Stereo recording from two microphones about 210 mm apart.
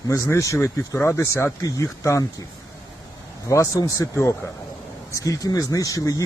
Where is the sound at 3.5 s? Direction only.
15° left (ahead or behind).